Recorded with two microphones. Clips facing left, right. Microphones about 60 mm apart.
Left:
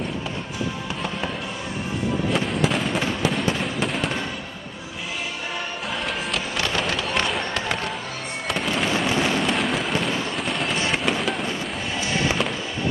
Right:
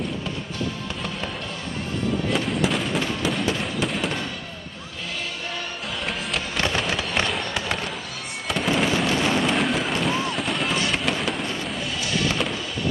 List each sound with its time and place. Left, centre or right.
2.3 s fireworks: centre
6.8 s fireworks: centre
9.0 s a sound: centre
10.9 s fireworks: centre
12.0 s music: left